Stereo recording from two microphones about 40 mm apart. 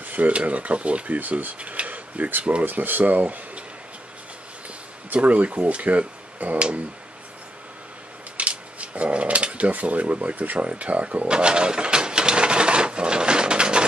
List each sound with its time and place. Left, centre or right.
0.0 s speech: right
3.0 s speech: right
4.6 s speech: right
8.4 s speech: right
11.2 s a sound: right